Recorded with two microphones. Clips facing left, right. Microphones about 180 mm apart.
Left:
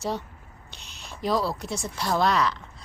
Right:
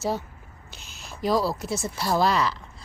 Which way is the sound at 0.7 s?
5° right (ahead or behind).